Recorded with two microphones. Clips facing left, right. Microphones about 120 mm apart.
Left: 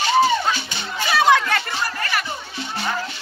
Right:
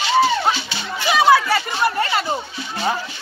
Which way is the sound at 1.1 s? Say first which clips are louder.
Right 3 dB; 5° right (ahead or behind).